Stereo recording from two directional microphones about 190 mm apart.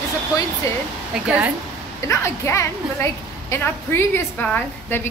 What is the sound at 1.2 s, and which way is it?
Speech, 5° right (ahead or behind).